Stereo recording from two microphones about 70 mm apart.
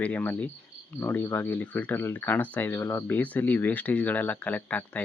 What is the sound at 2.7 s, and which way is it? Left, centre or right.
Speech, left.